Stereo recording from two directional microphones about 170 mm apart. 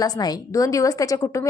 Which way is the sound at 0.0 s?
20° left (ahead or behind).